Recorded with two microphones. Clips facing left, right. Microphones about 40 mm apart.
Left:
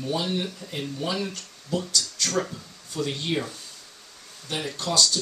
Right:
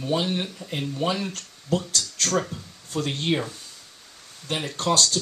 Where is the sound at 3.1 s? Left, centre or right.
Right.